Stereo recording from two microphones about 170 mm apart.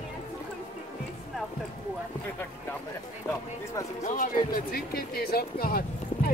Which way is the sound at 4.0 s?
45° left (ahead or behind).